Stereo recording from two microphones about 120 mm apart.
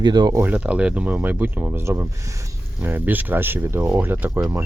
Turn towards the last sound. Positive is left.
turn(degrees=-20)  # may be behind; listen again after turning